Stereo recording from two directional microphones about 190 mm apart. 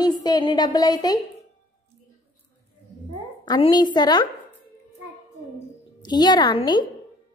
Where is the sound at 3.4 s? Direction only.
25° left (ahead or behind).